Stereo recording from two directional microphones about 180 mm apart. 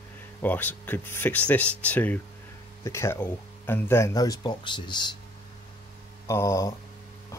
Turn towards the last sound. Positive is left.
turn(degrees=15)  # may be behind; listen again after turning